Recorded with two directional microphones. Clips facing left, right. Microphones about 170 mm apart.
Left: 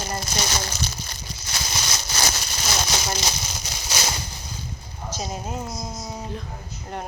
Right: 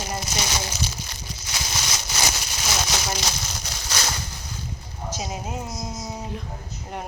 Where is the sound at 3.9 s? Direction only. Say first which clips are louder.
Left 1 dB; 15° left (ahead or behind).